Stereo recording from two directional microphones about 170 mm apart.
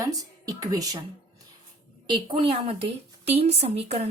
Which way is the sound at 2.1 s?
30° right (ahead or behind).